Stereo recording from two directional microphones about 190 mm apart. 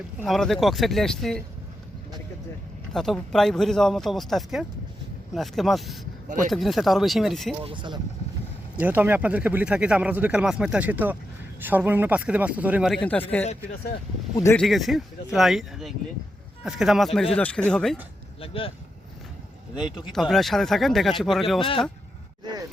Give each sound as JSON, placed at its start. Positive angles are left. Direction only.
{"t": 0.2, "sound": "speech", "side_deg": 0}
{"t": 2.9, "sound": "speech", "side_deg": 0}
{"t": 7.6, "sound": "speech", "side_deg": -25}
{"t": 8.7, "sound": "a man's voice", "side_deg": -10}
{"t": 12.9, "sound": "speech", "side_deg": 10}
{"t": 14.5, "sound": "speech", "side_deg": 0}
{"t": 18.3, "sound": "speech", "side_deg": 30}
{"t": 20.1, "sound": "speech", "side_deg": 0}